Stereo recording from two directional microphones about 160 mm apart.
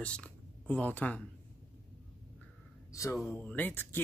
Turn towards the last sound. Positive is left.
turn(degrees=10)  # may be behind; listen again after turning